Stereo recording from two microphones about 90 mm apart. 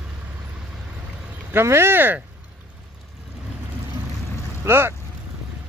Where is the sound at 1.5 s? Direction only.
25° right (ahead or behind).